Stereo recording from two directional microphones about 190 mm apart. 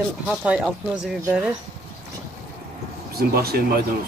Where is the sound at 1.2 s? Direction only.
5° right (ahead or behind).